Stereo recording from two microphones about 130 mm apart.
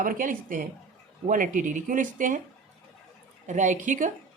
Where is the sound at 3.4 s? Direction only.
70° right (ahead or behind).